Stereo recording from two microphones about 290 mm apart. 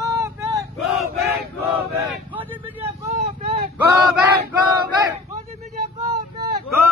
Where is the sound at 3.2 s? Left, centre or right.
Right.